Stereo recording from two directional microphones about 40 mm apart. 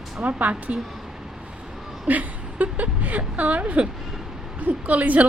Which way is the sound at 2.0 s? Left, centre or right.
Right.